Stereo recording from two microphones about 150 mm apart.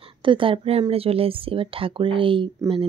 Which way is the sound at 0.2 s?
35° right (ahead or behind).